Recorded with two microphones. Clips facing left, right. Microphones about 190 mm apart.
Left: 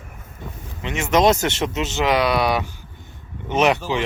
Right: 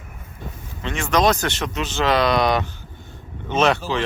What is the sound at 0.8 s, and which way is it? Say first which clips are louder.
Speech: left 2 dB; 20° left (ahead or behind).